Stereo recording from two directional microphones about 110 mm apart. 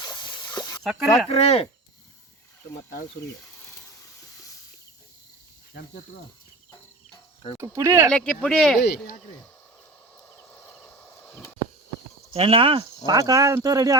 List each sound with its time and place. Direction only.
0.0 s spray: 40° left (ahead or behind)
0.8 s speech: centre (ahead or behind)
1.3 s speech: 65° left (ahead or behind)
7.1 s cricket: 55° left (ahead or behind)
7.6 s speech: 25° right (ahead or behind)
8.1 s speech: 10° left (ahead or behind)
12.3 s speech: 60° right (ahead or behind)
13.1 s speech: 35° right (ahead or behind)